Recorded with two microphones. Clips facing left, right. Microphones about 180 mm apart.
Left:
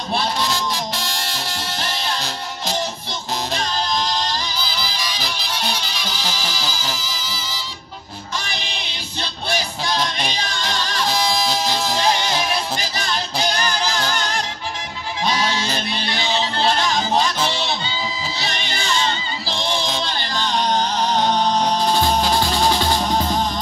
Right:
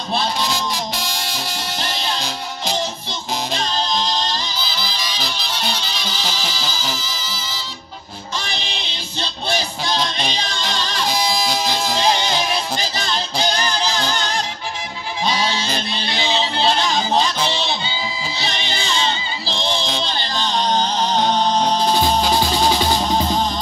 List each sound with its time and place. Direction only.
0.4 s music: centre (ahead or behind)
3.5 s music: 25° right (ahead or behind)
6.1 s music: 5° left (ahead or behind)
9.5 s music: 25° right (ahead or behind)
11.1 s music: centre (ahead or behind)
12.7 s music: 25° right (ahead or behind)
16.1 s music: 20° right (ahead or behind)
18.5 s music: 20° right (ahead or behind)
19.6 s music: 15° left (ahead or behind)
20.1 s music: 20° right (ahead or behind)